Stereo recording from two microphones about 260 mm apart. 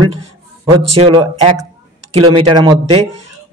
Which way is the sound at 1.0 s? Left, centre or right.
Right.